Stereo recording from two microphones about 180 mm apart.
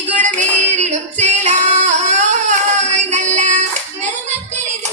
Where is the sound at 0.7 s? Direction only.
40° right (ahead or behind).